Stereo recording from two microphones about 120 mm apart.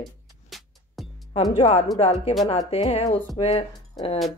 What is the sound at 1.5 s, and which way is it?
Speech, 60° left (ahead or behind).